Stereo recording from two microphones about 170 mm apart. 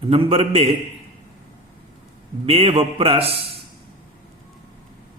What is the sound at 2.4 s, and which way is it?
Speech, 35° right (ahead or behind).